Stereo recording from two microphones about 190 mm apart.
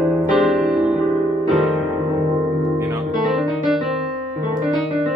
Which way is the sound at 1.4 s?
Centre (ahead or behind).